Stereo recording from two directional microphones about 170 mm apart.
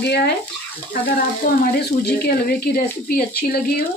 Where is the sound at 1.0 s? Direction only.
65° left (ahead or behind).